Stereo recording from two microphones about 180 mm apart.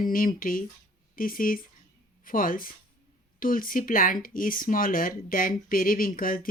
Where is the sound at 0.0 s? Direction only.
50° left (ahead or behind).